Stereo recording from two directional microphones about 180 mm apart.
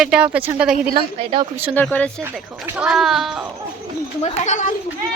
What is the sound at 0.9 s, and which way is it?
Speech, 35° right (ahead or behind).